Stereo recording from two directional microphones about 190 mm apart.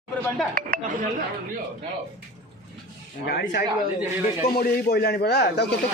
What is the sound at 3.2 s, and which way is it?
A man's voice, 60° left (ahead or behind).